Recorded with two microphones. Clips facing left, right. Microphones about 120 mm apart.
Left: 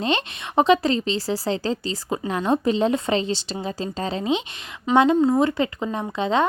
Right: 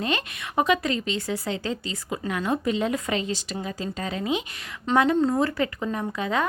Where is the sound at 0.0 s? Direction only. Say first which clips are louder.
Left 4 dB; 25° left (ahead or behind).